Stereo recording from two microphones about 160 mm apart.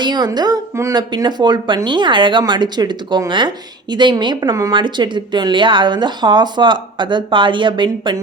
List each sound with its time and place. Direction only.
0.0 s speech: 25° right (ahead or behind)